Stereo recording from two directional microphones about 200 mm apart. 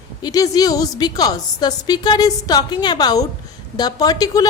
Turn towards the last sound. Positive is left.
turn(degrees=20)  # may be behind; listen again after turning